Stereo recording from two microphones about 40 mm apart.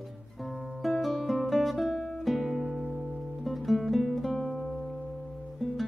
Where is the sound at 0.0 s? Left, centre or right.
Centre.